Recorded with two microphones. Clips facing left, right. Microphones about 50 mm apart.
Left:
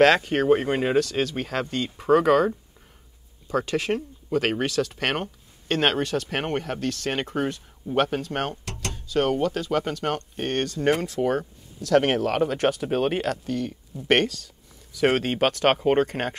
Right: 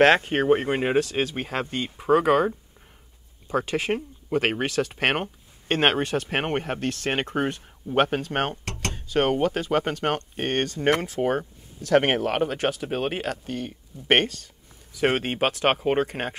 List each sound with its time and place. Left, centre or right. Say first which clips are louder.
0.0 s speech: even; right
9.1 s speech: right 1 dB; right
12.4 s speech: left 3 dB; centre
13.5 s speech: left 4 dB; right